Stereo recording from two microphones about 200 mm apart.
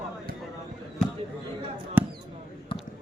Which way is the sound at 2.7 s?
25° left (ahead or behind).